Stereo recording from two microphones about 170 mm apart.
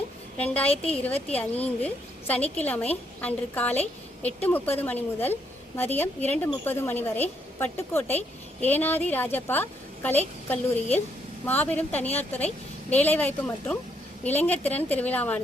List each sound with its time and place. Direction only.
0.3 s a woman's voice: 10° left (ahead or behind)
0.7 s a woman's voice: 35° left (ahead or behind)
1.4 s a woman's voice: 10° left (ahead or behind)